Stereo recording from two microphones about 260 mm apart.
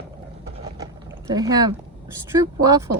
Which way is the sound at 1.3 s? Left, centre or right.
Centre.